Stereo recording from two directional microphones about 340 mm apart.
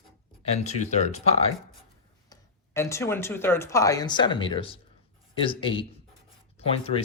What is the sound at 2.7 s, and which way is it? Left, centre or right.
Speech, centre.